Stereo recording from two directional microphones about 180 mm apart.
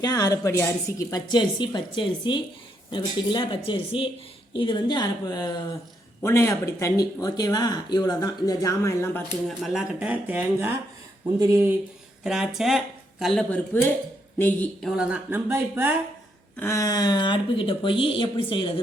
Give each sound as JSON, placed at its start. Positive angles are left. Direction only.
{"t": 0.0, "sound": "speech", "side_deg": 20}
{"t": 9.5, "sound": "speech", "side_deg": 0}
{"t": 12.2, "sound": "speech", "side_deg": -5}
{"t": 16.6, "sound": "speech", "side_deg": 15}